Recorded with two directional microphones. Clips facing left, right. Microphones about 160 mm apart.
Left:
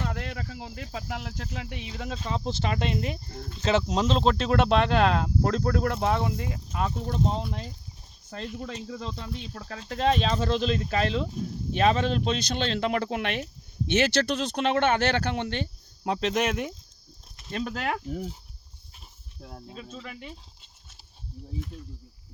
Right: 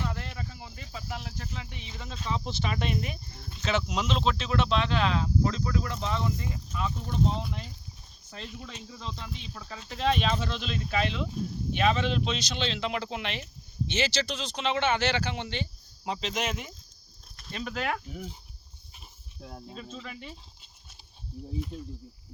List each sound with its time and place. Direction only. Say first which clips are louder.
0.0 s a sound: left 3 dB; 65° left (ahead or behind); by 0.9 s 85° left
1.4 s speech: left 4 dB; 75° left (ahead or behind)
2.1 s speech: even; 40° left (ahead or behind)
2.4 s speech: left 4 dB; 30° left (ahead or behind)
3.2 s speech: left 5 dB; 40° left (ahead or behind)
8.3 s speech: left 7 dB; 50° left (ahead or behind)
9.9 s speech: left 3 dB; 40° left (ahead or behind); by 16.7 s 65° left (ahead or behind)
17.6 s speech: left 2 dB; 30° left (ahead or behind)
19.4 s speech: even; centre (ahead or behind)
21.7 s speech: right 4 dB; 25° right (ahead or behind)